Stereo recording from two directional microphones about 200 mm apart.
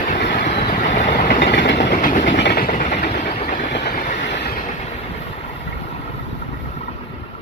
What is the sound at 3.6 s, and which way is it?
Train, 55° left (ahead or behind).